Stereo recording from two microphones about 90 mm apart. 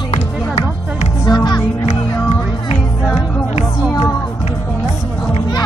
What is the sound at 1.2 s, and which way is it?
Music, 50° left (ahead or behind).